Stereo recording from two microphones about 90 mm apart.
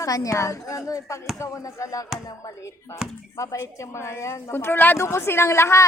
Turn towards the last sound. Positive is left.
turn(degrees=30)  # may be behind; listen again after turning